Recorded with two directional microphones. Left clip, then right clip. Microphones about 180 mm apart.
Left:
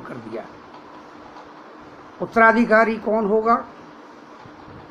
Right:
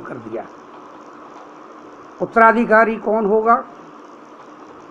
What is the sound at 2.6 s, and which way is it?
Speech, 20° left (ahead or behind).